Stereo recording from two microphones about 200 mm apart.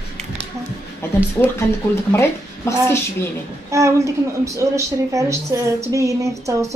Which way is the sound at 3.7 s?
15° right (ahead or behind).